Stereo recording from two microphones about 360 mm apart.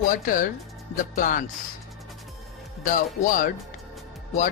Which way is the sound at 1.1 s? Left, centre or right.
Left.